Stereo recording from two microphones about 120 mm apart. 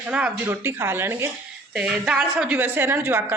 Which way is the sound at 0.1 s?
10° right (ahead or behind).